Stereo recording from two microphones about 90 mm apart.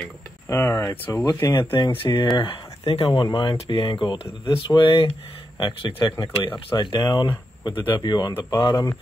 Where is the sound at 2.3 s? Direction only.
85° left; by 8.8 s 55° left (ahead or behind).